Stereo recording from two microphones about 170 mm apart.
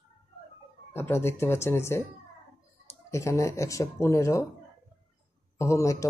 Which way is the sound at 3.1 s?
15° left (ahead or behind).